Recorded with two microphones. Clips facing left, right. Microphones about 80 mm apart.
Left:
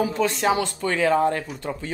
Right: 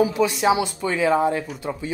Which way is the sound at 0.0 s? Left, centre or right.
Centre.